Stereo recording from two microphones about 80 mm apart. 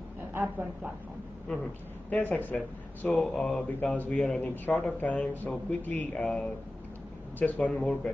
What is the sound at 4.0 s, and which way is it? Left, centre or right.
Speech, left.